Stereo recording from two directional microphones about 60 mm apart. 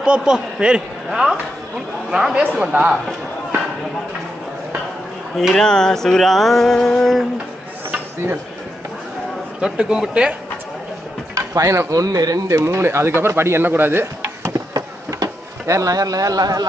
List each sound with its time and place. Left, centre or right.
0.0 s a man's voice: centre
5.4 s speech: centre
5.6 s a sound: centre
9.6 s a man's voice: centre
11.3 s speech: right
11.9 s speech: right
14.7 s a sound: right